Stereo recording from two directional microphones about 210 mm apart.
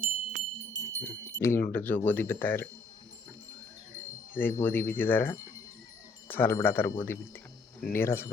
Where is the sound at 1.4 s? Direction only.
10° left (ahead or behind).